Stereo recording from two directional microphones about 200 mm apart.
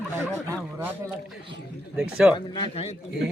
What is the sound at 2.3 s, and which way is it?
Speech, 25° left (ahead or behind).